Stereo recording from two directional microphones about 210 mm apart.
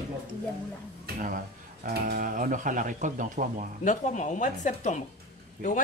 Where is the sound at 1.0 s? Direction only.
40° right (ahead or behind).